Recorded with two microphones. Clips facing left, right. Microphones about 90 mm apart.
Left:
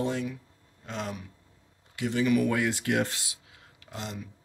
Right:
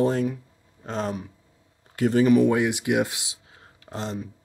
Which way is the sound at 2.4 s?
20° right (ahead or behind).